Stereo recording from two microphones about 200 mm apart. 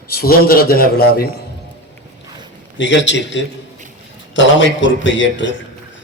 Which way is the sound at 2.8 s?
65° left (ahead or behind).